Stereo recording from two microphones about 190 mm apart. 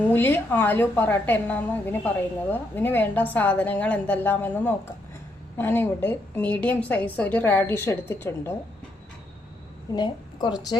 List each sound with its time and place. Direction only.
0.1 s a woman's voice: 10° left (ahead or behind)
9.9 s a woman's voice: 20° left (ahead or behind)